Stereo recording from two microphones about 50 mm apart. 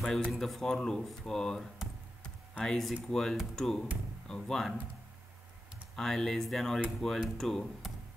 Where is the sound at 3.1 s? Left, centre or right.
Centre.